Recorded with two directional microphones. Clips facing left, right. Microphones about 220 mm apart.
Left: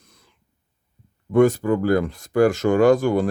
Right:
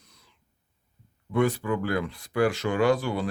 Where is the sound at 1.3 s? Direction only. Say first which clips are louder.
Left 8 dB; 45° left (ahead or behind).